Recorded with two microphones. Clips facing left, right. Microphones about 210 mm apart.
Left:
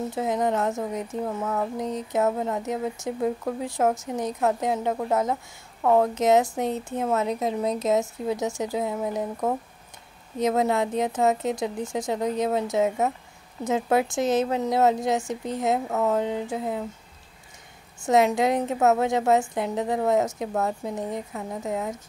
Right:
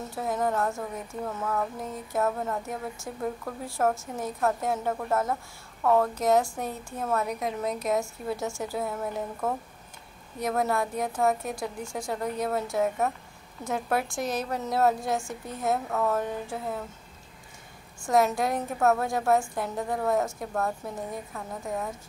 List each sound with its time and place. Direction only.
0.1 s speech: 20° left (ahead or behind)
18.0 s speech: 20° left (ahead or behind)